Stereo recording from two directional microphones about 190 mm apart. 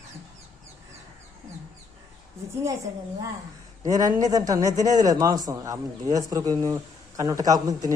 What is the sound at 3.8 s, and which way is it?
A man's voice, 20° right (ahead or behind).